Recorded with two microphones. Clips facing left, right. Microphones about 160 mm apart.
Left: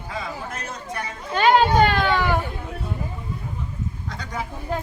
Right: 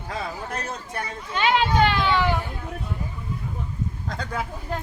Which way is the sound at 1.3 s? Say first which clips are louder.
Left 5 dB; 40° left (ahead or behind).